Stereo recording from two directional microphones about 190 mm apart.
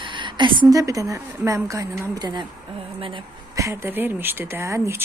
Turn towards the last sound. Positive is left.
turn(degrees=-15)  # may be behind; listen again after turning